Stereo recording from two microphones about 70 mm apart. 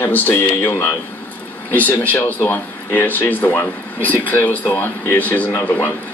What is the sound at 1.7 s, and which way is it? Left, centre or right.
Speech, left.